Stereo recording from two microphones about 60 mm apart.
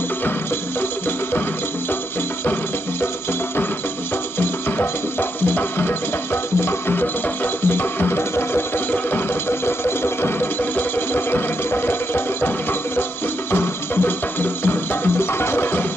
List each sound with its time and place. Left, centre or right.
4.4 s music: left